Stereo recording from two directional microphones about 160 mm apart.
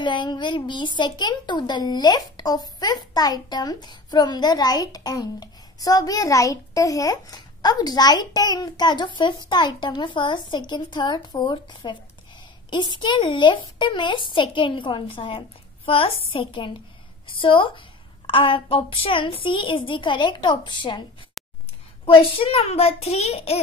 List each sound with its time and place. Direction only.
0.0 s a woman's voice: 30° left (ahead or behind)
21.4 s a sound: centre (ahead or behind)
22.0 s speech: 35° left (ahead or behind)